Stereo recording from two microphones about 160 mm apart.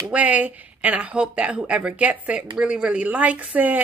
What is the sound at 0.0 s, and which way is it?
A woman's voice, 10° right (ahead or behind).